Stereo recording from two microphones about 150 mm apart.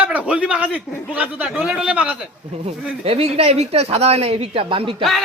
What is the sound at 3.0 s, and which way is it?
Speech, 45° right (ahead or behind).